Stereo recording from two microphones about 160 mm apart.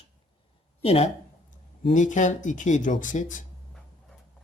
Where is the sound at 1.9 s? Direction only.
50° left (ahead or behind).